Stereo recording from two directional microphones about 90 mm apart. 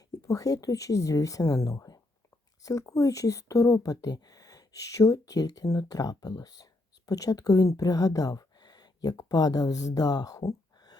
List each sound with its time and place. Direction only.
0.2 s speech: 40° left (ahead or behind)